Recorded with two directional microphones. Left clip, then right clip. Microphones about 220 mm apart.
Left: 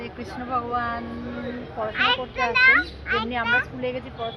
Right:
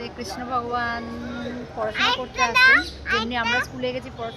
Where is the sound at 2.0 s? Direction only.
50° right (ahead or behind); by 3.7 s 30° right (ahead or behind).